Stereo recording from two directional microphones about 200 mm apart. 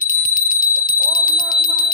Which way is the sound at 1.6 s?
45° left (ahead or behind).